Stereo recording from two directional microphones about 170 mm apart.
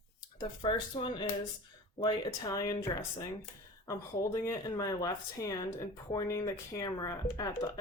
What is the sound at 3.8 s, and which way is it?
Speech, 20° left (ahead or behind).